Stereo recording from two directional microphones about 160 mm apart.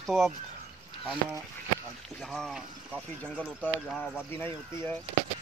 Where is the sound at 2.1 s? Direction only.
Centre (ahead or behind).